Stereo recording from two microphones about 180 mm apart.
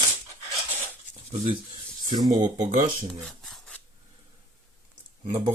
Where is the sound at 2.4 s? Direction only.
40° right (ahead or behind).